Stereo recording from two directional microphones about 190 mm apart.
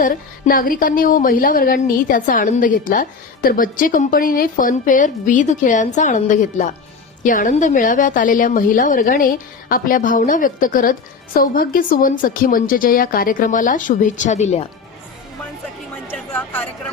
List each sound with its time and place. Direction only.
0.0 s a woman's voice: 45° left (ahead or behind)
16.0 s chatter: 10° left (ahead or behind)